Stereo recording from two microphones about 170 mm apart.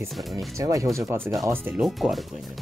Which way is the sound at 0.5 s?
20° right (ahead or behind).